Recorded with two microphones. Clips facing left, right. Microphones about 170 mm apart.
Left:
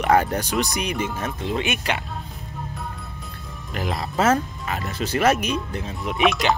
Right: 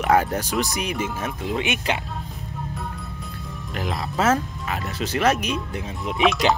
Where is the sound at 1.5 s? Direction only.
20° right (ahead or behind).